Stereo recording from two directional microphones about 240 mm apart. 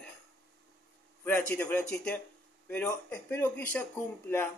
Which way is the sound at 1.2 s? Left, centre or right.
Centre.